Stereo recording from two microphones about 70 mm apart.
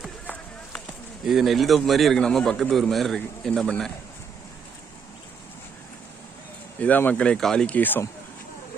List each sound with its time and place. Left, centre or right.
1.2 s a man's voice: centre
6.8 s speech: left
7.3 s speech: centre
7.8 s speech: left